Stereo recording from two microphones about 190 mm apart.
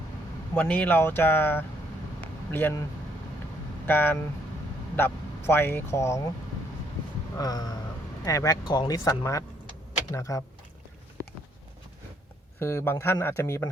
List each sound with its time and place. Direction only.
0.5 s speech: 10° left (ahead or behind)
3.8 s speech: 10° left (ahead or behind)
7.3 s speech: 20° left (ahead or behind)
12.5 s speech: 15° left (ahead or behind)